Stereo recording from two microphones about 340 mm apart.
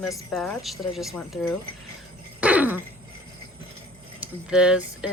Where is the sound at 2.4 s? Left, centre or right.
Centre.